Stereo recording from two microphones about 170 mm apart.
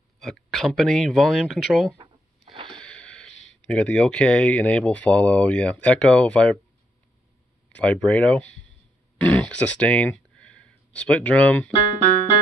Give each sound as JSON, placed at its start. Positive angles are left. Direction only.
{"t": 0.2, "sound": "speech", "side_deg": 0}
{"t": 2.0, "sound": "a sound", "side_deg": -30}
{"t": 2.7, "sound": "wheeze", "side_deg": 5}
{"t": 3.6, "sound": "speech", "side_deg": 5}
{"t": 7.7, "sound": "speech", "side_deg": 5}